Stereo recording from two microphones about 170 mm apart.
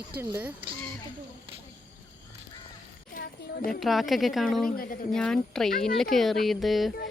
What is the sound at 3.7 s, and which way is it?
Speech, centre (ahead or behind).